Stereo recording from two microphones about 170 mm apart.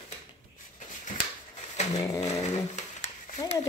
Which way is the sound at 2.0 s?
20° left (ahead or behind).